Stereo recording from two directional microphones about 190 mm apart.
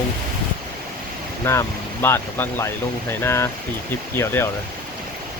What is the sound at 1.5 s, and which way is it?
Speech, 15° left (ahead or behind).